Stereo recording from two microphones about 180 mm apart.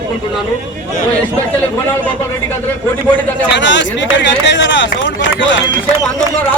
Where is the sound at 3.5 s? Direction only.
85° left.